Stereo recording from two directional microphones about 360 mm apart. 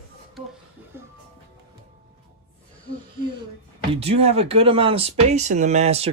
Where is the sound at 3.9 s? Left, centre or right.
Centre.